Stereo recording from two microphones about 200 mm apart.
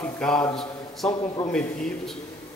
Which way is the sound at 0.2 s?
5° left (ahead or behind).